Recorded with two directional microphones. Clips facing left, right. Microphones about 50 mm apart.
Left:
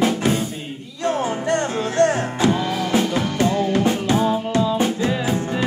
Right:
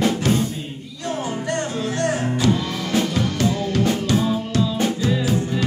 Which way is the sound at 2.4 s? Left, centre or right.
Centre.